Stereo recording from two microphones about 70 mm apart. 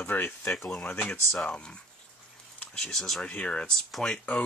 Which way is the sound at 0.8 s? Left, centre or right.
Centre.